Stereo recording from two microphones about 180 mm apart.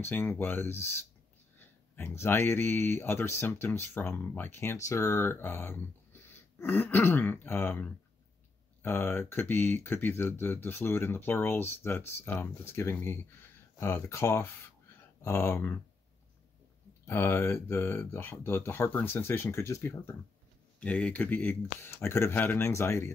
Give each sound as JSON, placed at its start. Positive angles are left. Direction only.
{"t": 0.0, "sound": "speech", "side_deg": 10}
{"t": 17.0, "sound": "speech", "side_deg": 10}